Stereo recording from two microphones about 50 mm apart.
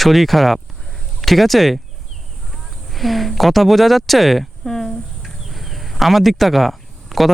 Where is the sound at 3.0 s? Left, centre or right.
Centre.